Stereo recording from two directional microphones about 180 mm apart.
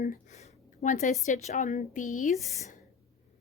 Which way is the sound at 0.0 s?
45° left (ahead or behind).